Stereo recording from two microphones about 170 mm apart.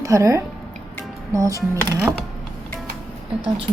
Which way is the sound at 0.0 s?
20° right (ahead or behind).